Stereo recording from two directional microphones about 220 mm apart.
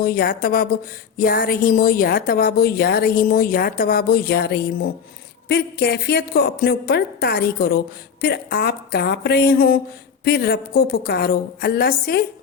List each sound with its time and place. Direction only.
0.0 s a woman's voice: 45° left (ahead or behind)